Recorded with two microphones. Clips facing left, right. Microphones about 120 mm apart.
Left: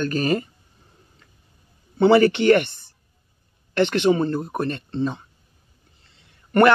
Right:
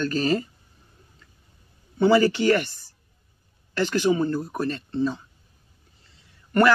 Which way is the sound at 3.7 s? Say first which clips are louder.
Left 3 dB; 65° left (ahead or behind).